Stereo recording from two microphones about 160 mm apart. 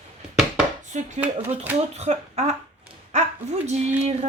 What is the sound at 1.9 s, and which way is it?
A woman's voice, 45° right (ahead or behind).